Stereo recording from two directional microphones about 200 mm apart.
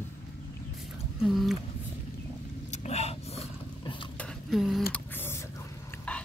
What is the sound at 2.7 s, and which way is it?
Vehicle, 30° left (ahead or behind).